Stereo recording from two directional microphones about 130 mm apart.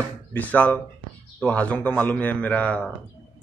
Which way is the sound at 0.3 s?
10° left (ahead or behind).